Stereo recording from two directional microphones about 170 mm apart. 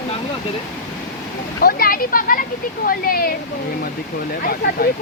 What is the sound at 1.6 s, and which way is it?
Speech, 60° left (ahead or behind).